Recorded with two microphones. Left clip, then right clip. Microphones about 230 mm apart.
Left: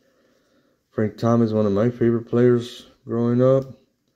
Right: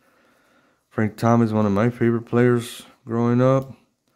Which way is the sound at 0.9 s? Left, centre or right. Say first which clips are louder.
Right 1 dB; right.